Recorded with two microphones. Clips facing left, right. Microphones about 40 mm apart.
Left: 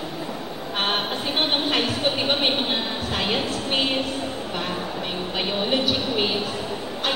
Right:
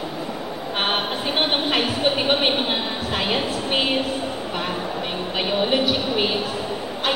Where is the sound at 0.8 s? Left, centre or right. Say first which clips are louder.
Right 1 dB; centre.